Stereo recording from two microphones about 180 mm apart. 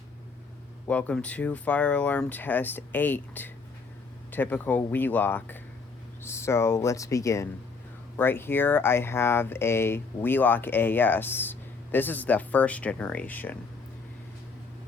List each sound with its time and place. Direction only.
0.9 s speech: 5° left (ahead or behind)